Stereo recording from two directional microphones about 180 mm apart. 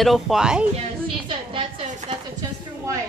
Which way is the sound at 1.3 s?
30° right (ahead or behind).